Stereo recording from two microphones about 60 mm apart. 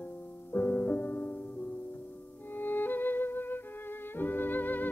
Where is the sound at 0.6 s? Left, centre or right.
Left.